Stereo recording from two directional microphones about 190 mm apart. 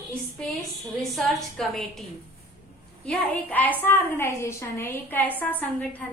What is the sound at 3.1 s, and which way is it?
A woman's voice, 10° left (ahead or behind).